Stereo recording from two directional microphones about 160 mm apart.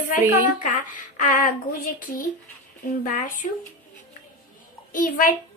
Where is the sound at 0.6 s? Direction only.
55° left (ahead or behind).